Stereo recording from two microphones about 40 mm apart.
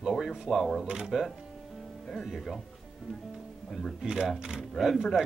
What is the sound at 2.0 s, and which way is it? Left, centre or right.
Speech, centre.